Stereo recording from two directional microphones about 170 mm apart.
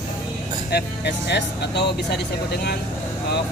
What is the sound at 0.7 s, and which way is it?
Speech, 75° left (ahead or behind).